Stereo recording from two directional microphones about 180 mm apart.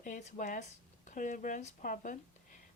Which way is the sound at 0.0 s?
45° left (ahead or behind).